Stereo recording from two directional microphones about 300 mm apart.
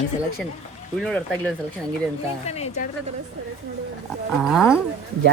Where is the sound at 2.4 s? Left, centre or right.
Left.